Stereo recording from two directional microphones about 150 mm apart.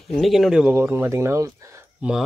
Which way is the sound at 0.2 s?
Centre (ahead or behind).